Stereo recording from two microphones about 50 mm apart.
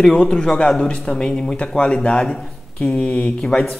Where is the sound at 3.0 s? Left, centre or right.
Left.